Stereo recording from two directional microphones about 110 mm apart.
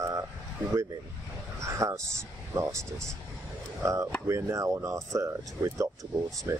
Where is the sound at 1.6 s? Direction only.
25° right (ahead or behind).